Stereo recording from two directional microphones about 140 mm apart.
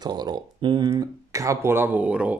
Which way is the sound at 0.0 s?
30° right (ahead or behind).